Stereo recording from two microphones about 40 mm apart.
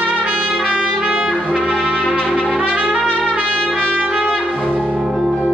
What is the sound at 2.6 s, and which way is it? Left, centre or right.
Trumpet, right.